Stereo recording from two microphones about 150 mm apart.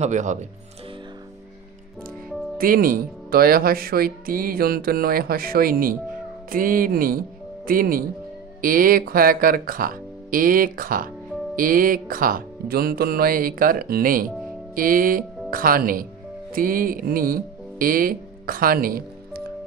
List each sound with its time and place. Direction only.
0.0 s speech: 55° right (ahead or behind)
2.5 s speech: 75° right (ahead or behind)
14.8 s speech: 70° right (ahead or behind)